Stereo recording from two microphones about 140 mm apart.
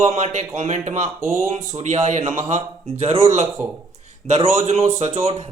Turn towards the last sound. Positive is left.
turn(degrees=-45)  # may be behind; listen again after turning